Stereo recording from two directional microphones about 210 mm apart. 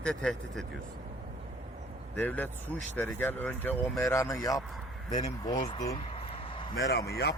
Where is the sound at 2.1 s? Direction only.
10° left (ahead or behind).